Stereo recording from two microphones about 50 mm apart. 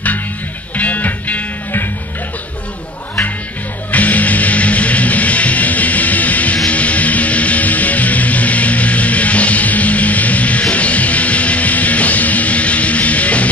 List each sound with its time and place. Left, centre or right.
0.7 s music: left
3.9 s music: left